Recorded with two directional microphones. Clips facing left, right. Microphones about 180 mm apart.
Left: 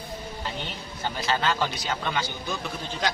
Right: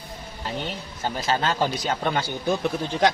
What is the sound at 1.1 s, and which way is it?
A man's voice, 45° right (ahead or behind).